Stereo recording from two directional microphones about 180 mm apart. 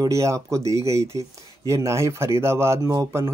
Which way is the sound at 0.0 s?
15° right (ahead or behind).